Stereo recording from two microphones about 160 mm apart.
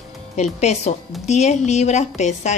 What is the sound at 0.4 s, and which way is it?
Speech, 45° left (ahead or behind).